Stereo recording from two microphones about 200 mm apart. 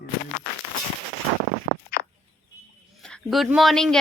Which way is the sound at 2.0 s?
50° left (ahead or behind).